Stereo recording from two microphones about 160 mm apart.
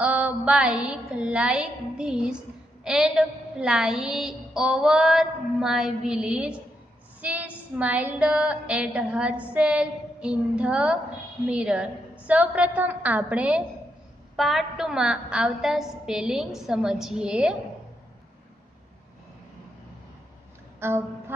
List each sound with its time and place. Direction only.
0.0 s music: 10° right (ahead or behind)
7.2 s a woman's voice: 10° right (ahead or behind)
14.3 s music: centre (ahead or behind)
20.8 s a woman's voice: 15° right (ahead or behind)